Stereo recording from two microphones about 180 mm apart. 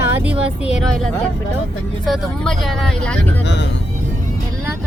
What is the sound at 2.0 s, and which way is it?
Speech, centre (ahead or behind).